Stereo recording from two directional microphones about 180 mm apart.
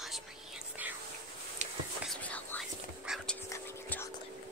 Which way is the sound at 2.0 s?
5° left (ahead or behind).